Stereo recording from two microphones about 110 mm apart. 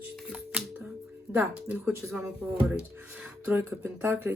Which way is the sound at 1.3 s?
15° right (ahead or behind).